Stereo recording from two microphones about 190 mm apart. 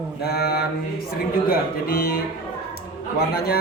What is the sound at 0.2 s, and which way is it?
Mantra, 55° left (ahead or behind).